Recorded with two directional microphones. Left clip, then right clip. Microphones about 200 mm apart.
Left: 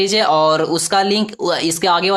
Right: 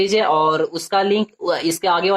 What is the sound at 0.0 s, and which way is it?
Speech, 35° left (ahead or behind).